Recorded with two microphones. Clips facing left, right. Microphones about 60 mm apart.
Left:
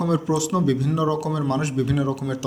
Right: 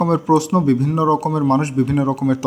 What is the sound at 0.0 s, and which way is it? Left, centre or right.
Speech, right.